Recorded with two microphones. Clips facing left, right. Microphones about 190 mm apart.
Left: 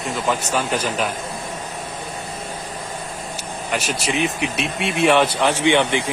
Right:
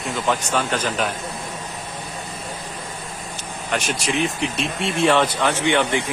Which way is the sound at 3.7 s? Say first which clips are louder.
Even; 5° left (ahead or behind).